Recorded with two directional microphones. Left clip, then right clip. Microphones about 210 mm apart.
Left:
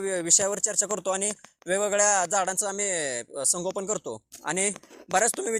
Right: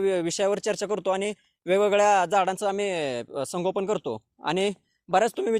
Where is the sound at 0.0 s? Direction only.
50° right (ahead or behind).